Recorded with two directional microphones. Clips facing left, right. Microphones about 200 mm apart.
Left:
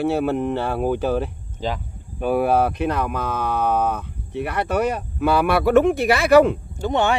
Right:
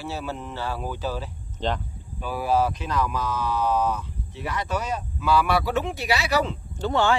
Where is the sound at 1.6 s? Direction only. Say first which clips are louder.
Left 1 dB; 5° left (ahead or behind).